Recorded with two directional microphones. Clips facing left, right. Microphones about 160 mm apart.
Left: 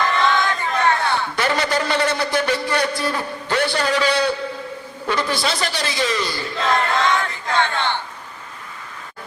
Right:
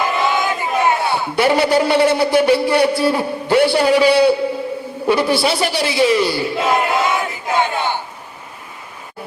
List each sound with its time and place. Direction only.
0.0 s a man's voice: 10° right (ahead or behind)